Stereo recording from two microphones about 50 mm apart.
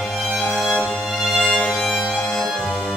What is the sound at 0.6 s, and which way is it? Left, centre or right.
Music, centre.